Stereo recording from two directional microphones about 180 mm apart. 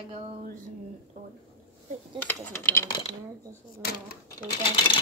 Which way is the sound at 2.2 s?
10° left (ahead or behind).